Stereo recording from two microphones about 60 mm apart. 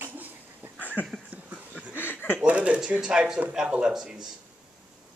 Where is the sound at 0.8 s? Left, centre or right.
Left.